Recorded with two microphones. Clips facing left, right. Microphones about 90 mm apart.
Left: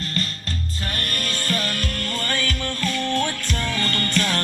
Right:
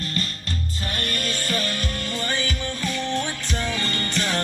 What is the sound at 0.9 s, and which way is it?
Music, 20° right (ahead or behind).